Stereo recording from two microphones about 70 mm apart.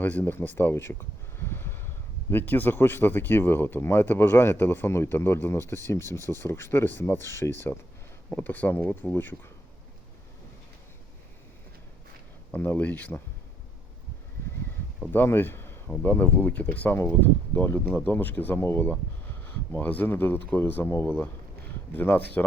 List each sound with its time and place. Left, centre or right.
0.0 s speech: left
8.4 s speech: left
12.5 s speech: left
15.1 s speech: left